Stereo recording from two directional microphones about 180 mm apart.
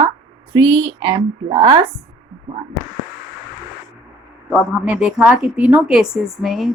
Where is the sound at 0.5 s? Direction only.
30° right (ahead or behind).